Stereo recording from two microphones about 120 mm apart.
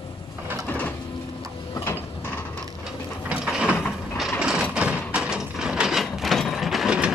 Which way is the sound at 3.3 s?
10° right (ahead or behind).